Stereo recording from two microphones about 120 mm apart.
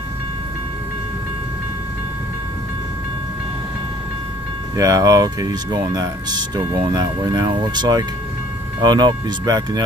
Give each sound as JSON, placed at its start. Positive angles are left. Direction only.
{"t": 4.7, "sound": "speech", "side_deg": -30}